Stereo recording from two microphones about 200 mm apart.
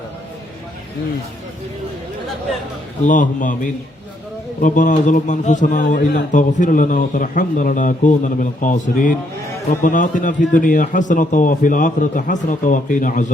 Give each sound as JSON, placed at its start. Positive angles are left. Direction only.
{"t": 3.0, "sound": "a man's voice", "side_deg": 40}